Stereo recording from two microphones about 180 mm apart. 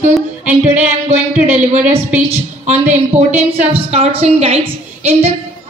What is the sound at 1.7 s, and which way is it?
A woman's voice, 40° right (ahead or behind).